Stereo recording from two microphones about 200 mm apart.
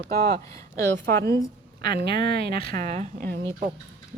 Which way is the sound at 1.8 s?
50° right (ahead or behind).